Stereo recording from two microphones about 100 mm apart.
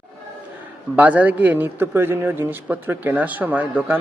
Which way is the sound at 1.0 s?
15° right (ahead or behind).